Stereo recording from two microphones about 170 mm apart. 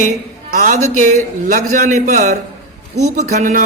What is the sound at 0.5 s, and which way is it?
Speech, 45° right (ahead or behind).